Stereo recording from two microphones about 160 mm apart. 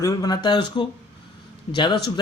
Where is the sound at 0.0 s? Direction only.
20° left (ahead or behind).